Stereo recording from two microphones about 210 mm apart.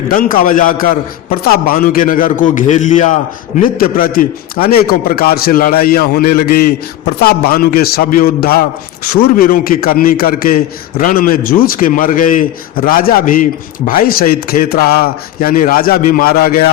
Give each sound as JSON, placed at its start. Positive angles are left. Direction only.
{"t": 0.1, "sound": "a man's voice", "side_deg": 40}